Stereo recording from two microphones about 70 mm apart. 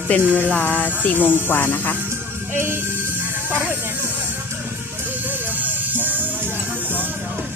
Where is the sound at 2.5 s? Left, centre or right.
Right.